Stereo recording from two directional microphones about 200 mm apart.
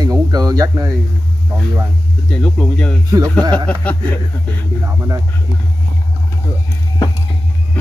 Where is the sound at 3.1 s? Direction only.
15° right (ahead or behind).